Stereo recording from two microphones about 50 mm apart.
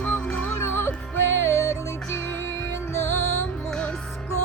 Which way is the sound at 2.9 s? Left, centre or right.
Left.